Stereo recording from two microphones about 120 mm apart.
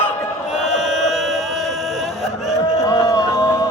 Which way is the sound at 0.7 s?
Centre (ahead or behind).